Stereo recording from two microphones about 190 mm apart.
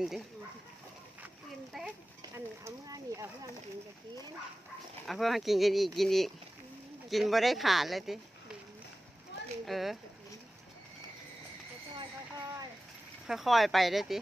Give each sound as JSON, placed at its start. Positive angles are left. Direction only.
{"t": 1.2, "sound": "a sound", "side_deg": -5}
{"t": 2.3, "sound": "speech", "side_deg": -15}
{"t": 5.0, "sound": "speech", "side_deg": 0}
{"t": 9.7, "sound": "speech", "side_deg": 0}
{"t": 12.0, "sound": "a sound", "side_deg": -20}
{"t": 13.3, "sound": "speech", "side_deg": 0}